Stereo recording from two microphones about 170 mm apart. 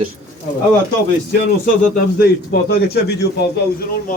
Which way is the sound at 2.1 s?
65° left (ahead or behind).